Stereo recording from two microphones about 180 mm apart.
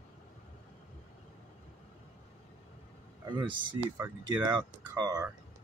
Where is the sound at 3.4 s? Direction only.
25° right (ahead or behind).